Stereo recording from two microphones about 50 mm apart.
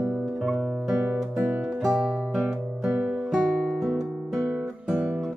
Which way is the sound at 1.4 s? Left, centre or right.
Right.